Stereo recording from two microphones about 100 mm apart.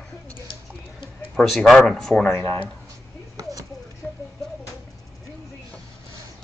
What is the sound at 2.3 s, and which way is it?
Speech, 25° left (ahead or behind).